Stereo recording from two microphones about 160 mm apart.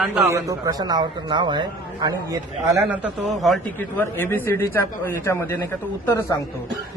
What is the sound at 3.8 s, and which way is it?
A man's voice, 10° left (ahead or behind).